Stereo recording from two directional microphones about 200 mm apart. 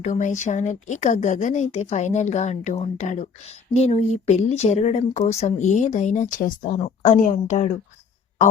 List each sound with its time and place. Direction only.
0.0 s speech: 35° left (ahead or behind)